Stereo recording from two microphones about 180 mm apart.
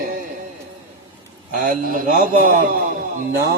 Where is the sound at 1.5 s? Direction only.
50° right (ahead or behind).